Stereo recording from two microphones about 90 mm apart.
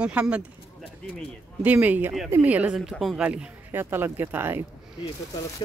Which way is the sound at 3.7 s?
25° right (ahead or behind).